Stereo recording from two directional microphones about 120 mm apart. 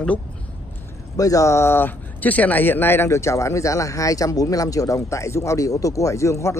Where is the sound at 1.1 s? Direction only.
30° left (ahead or behind).